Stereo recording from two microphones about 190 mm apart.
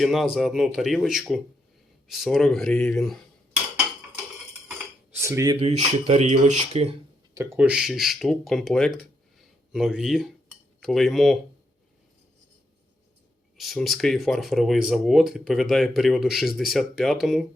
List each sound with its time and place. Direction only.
0.0 s speech: centre (ahead or behind)
2.0 s cutlery: centre (ahead or behind)
5.2 s speech: 15° right (ahead or behind)
5.5 s speech: 30° right (ahead or behind)
7.3 s speech: 10° right (ahead or behind)
9.7 s cutlery: centre (ahead or behind)
13.6 s speech: centre (ahead or behind)